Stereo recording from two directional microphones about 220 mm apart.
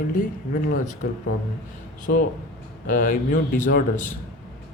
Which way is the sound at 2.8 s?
35° left (ahead or behind).